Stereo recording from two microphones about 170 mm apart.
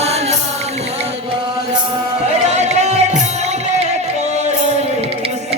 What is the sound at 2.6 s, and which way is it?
Music, 40° right (ahead or behind).